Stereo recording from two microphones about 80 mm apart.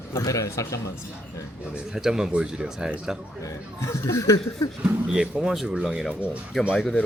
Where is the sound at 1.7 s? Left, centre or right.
Centre.